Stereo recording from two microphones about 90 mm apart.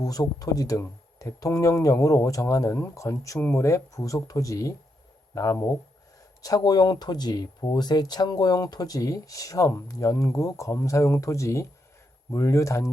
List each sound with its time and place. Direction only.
0.0 s speech: 45° left (ahead or behind)